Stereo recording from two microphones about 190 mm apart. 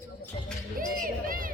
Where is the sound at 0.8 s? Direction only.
50° right (ahead or behind).